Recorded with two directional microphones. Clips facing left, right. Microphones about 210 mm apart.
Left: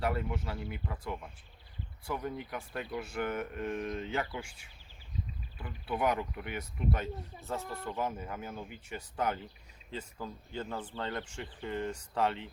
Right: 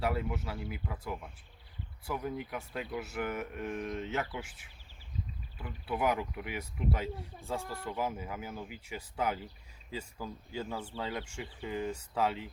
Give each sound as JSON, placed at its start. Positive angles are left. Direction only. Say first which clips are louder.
{"t": 0.0, "sound": "speech", "louder": "even", "side_deg": -5}